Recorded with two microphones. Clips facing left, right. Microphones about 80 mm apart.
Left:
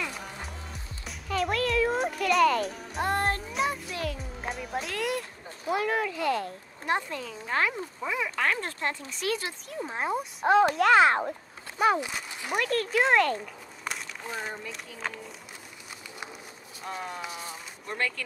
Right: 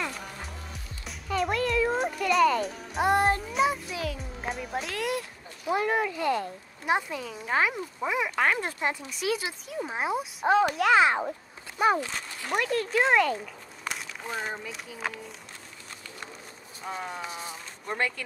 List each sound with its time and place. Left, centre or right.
0.1 s music: centre
3.0 s music: centre
3.4 s music: centre
5.7 s a child's voice: centre
12.0 s speech: centre
12.5 s speech: centre
16.8 s a child's voice: centre
17.9 s speech: centre